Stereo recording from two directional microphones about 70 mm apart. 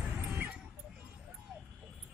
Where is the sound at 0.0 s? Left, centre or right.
Right.